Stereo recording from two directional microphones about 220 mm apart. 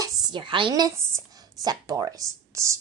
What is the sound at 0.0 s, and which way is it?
Speech, 20° right (ahead or behind).